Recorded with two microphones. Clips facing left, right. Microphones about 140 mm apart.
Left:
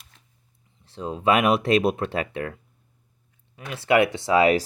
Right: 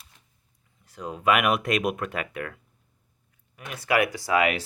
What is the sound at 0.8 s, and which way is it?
Speech, 30° left (ahead or behind).